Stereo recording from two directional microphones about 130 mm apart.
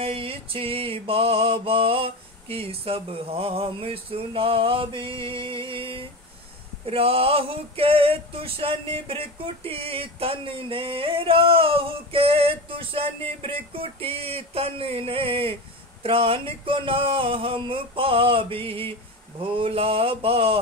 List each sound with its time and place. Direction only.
0.0 s male singing: 45° right (ahead or behind)